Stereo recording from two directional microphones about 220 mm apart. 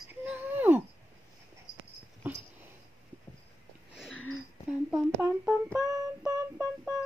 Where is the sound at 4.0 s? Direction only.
Centre (ahead or behind).